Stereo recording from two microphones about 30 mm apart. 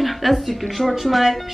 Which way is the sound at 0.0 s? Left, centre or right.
Centre.